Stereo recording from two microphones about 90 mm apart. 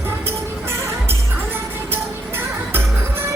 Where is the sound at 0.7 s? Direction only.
30° right (ahead or behind).